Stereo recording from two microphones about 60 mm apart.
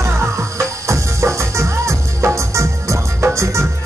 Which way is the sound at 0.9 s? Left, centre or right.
Right.